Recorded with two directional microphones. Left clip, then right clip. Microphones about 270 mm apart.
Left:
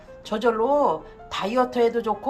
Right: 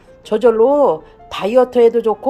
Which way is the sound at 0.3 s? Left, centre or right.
Right.